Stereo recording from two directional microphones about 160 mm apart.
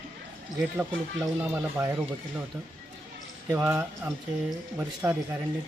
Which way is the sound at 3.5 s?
15° right (ahead or behind).